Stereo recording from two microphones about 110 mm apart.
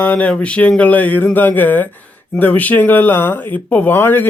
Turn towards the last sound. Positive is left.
turn(degrees=20)  # may be behind; listen again after turning